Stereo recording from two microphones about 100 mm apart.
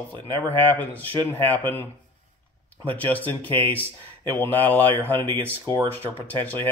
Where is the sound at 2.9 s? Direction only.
15° left (ahead or behind).